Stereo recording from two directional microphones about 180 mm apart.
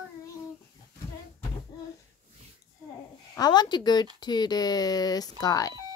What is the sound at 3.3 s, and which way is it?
Speech, 20° left (ahead or behind).